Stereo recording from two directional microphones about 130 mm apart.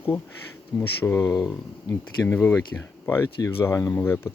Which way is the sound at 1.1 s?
20° left (ahead or behind).